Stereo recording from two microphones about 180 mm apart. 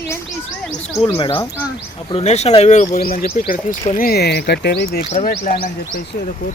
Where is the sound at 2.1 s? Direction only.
35° left (ahead or behind); by 5.0 s 65° left (ahead or behind).